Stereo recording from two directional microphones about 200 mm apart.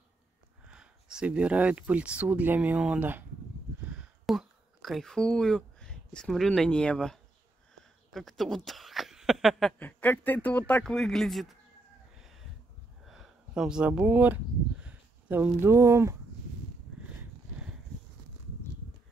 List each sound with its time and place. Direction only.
0.7 s speech: 5° right (ahead or behind)
13.0 s speech: centre (ahead or behind)